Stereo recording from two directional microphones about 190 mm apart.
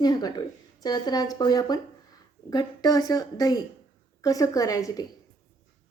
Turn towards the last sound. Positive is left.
turn(degrees=20)  # may be behind; listen again after turning